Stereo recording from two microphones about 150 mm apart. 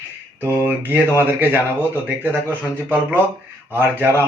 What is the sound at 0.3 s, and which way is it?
Speech, 15° right (ahead or behind).